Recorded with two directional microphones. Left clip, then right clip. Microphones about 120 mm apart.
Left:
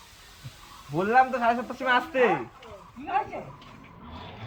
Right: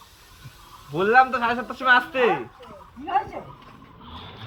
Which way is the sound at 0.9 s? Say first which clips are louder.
Right 4 dB; 30° left (ahead or behind).